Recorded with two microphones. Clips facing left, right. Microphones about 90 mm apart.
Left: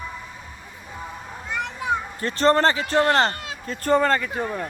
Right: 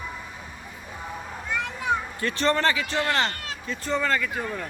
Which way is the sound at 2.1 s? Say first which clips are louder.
Left 10 dB; 35° left (ahead or behind).